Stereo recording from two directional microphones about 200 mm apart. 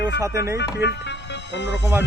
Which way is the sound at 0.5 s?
60° left (ahead or behind).